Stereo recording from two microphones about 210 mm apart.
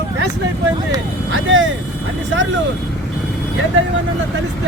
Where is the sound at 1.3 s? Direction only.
65° right (ahead or behind).